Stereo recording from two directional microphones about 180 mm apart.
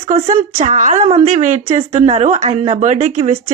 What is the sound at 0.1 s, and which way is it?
Speech, 35° right (ahead or behind).